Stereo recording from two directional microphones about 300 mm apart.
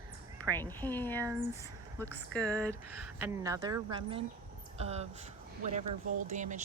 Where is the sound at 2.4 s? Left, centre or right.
Centre; by 5.1 s right.